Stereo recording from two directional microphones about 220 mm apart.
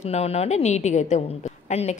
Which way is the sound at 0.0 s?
30° left (ahead or behind).